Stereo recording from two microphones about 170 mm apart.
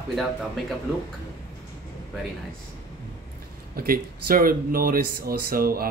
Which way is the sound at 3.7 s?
60° right (ahead or behind).